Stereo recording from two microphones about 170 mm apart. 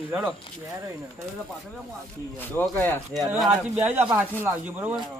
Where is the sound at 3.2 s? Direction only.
Centre (ahead or behind).